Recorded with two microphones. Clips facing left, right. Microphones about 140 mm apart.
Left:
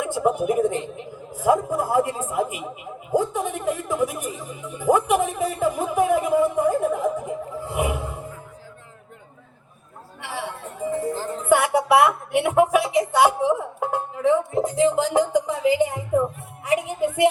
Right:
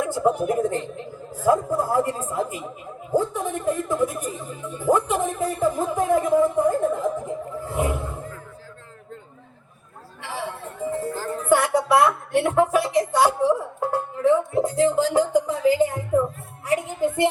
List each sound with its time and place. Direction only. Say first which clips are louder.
0.4 s a man's voice: left 1 dB; 15° left (ahead or behind)
10.8 s music: left 2 dB; 15° left (ahead or behind)
14.5 s a woman's voice: even; 15° left (ahead or behind)